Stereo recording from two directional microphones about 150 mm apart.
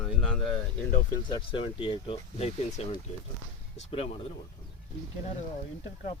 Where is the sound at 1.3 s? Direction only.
35° left (ahead or behind).